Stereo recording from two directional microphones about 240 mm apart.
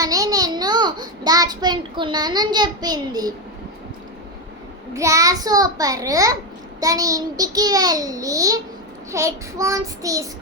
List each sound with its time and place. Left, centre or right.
0.0 s a child's voice: centre
4.9 s a child's voice: centre